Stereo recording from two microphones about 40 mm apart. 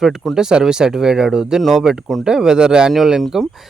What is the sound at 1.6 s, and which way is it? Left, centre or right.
Speech, centre.